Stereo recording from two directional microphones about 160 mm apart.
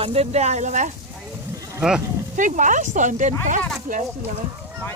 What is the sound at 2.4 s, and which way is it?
Speech, 50° right (ahead or behind).